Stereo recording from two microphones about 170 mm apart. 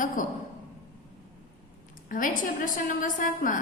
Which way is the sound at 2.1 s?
50° left (ahead or behind).